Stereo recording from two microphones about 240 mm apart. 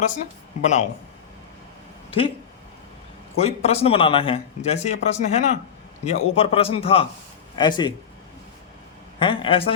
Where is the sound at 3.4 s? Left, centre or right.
Left.